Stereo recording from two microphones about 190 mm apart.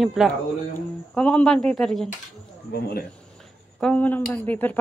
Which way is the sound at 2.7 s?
55° left (ahead or behind).